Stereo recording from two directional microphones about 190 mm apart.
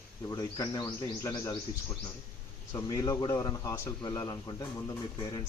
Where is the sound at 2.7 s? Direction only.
20° left (ahead or behind).